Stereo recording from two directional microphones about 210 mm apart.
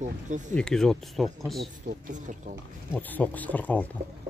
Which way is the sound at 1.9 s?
45° right (ahead or behind).